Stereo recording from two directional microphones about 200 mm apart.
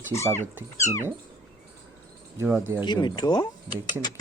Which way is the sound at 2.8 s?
20° left (ahead or behind).